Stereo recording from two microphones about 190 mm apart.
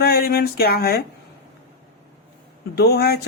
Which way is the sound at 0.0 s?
55° left (ahead or behind).